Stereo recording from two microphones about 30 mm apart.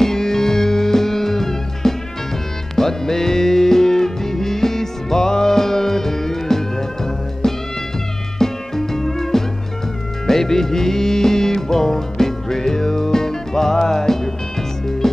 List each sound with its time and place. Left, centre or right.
0.0 s music: centre